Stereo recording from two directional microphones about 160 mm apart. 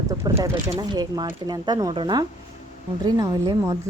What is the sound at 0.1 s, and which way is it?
Speech, 15° right (ahead or behind).